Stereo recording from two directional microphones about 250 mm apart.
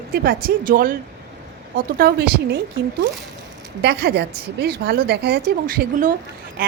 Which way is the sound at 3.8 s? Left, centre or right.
Right.